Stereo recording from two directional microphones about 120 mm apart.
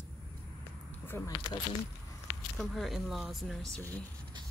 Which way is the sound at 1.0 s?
20° left (ahead or behind).